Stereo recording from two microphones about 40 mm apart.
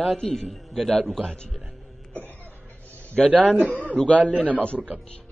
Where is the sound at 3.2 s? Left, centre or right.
Centre.